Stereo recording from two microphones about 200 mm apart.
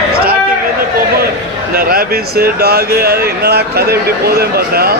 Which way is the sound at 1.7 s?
50° right (ahead or behind).